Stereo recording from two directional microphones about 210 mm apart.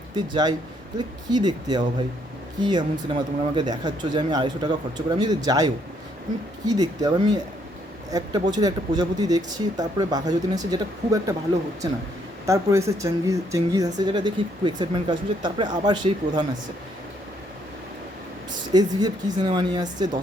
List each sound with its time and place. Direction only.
0.9 s speech: 20° right (ahead or behind)
12.5 s speech: 15° right (ahead or behind)
18.7 s speech: 20° right (ahead or behind)